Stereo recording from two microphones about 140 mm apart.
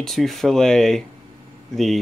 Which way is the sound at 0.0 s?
Centre (ahead or behind).